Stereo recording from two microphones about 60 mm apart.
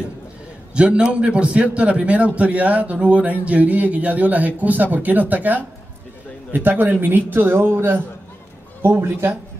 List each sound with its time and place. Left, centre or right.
0.7 s a man's voice: centre; by 9.3 s right